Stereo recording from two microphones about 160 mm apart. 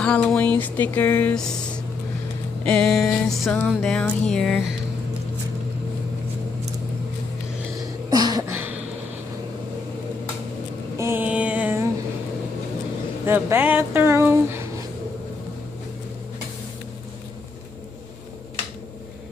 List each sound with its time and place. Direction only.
0.0 s speech: 5° left (ahead or behind)
2.6 s music: 5° left (ahead or behind)
8.1 s a sound: 25° right (ahead or behind)
8.5 s a sound: 15° right (ahead or behind)
11.0 s music: 15° right (ahead or behind)
13.2 s speech: 15° right (ahead or behind)